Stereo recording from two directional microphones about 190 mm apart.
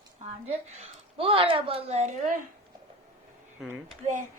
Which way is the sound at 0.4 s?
35° right (ahead or behind).